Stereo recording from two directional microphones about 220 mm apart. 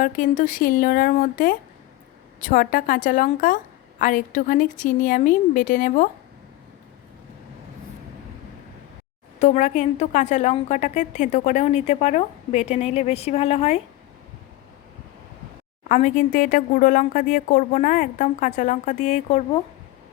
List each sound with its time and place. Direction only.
0.0 s a woman's voice: 35° left (ahead or behind)
9.4 s a woman's voice: 35° left (ahead or behind)
15.9 s a woman's voice: 35° left (ahead or behind)